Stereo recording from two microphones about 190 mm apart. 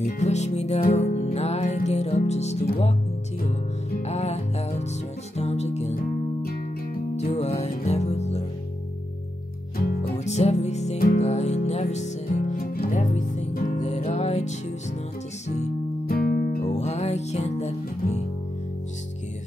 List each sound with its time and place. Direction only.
0.2 s music: 35° left (ahead or behind)
6.4 s music: 50° left (ahead or behind)
7.2 s music: 35° left (ahead or behind)
10.1 s music: 35° left (ahead or behind)
16.1 s music: 55° left (ahead or behind)
16.6 s music: 35° left (ahead or behind)